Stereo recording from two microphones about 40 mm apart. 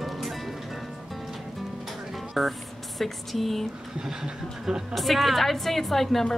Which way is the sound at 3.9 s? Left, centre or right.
Centre.